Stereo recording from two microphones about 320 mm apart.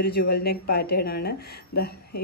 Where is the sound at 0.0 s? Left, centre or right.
Left.